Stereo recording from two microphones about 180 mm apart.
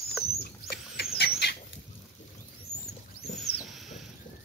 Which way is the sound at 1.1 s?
70° left (ahead or behind).